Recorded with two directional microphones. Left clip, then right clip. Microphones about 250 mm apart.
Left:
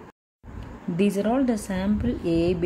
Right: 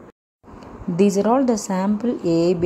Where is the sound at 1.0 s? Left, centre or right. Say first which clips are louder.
Right 6 dB; centre.